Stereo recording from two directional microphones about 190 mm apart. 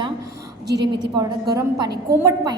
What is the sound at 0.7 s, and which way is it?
Speech, 60° right (ahead or behind).